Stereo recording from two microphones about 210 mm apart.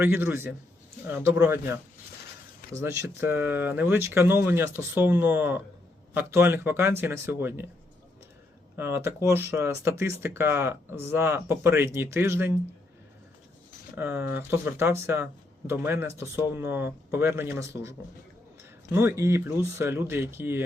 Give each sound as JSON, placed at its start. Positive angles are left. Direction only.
{"t": 0.0, "sound": "speech", "side_deg": -10}
{"t": 2.8, "sound": "speech", "side_deg": -10}
{"t": 8.7, "sound": "speech", "side_deg": -10}
{"t": 13.9, "sound": "speech", "side_deg": -10}